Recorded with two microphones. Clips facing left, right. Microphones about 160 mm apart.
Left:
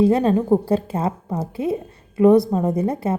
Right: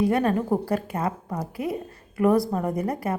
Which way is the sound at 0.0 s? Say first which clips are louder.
Left 5 dB; 25° left (ahead or behind).